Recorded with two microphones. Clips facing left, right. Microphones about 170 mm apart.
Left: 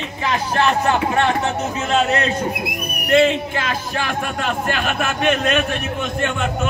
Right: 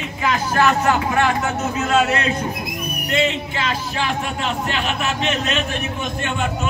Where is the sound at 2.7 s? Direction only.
60° left (ahead or behind).